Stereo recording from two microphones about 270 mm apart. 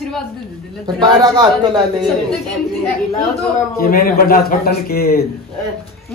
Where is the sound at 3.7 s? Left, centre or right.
Left.